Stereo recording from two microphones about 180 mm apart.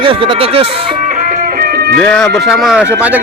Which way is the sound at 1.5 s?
60° right (ahead or behind).